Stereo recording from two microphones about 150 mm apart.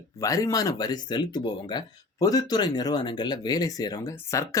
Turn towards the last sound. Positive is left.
turn(degrees=20)  # may be behind; listen again after turning